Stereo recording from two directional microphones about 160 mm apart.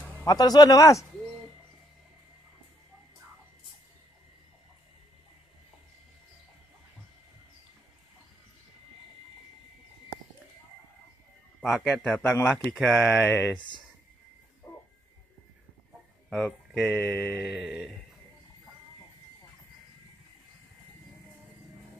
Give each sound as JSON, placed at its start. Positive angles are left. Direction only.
{"t": 0.2, "sound": "speech", "side_deg": 25}
{"t": 11.6, "sound": "speech", "side_deg": 0}
{"t": 16.3, "sound": "speech", "side_deg": 0}